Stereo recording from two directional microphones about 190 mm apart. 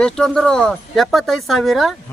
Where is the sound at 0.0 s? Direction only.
5° left (ahead or behind).